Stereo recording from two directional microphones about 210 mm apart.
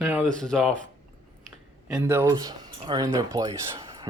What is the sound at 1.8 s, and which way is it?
Speech, 10° right (ahead or behind).